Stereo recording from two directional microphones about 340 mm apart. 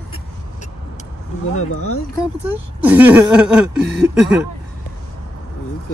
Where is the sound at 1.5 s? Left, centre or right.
Left.